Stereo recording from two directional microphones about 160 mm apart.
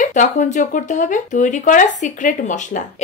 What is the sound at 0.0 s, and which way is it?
A woman's voice, 55° left (ahead or behind).